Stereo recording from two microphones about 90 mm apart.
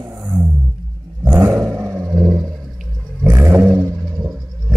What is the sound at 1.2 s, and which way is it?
Roar, 30° right (ahead or behind).